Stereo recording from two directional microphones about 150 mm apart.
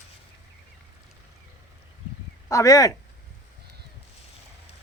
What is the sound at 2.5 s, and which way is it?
Speech, 20° left (ahead or behind).